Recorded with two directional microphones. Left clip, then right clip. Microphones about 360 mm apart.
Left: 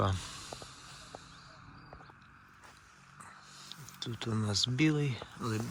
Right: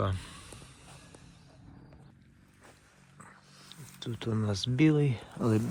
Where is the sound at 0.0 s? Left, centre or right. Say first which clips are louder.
Left 1 dB; centre.